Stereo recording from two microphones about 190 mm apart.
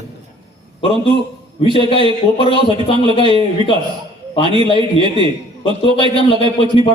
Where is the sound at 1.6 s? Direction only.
25° left (ahead or behind).